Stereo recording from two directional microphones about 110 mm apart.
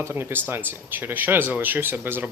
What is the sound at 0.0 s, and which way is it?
Speech, 20° right (ahead or behind).